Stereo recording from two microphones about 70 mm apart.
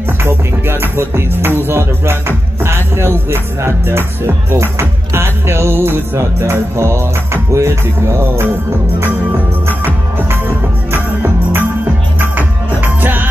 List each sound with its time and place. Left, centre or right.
0.2 s music: right
10.9 s music: right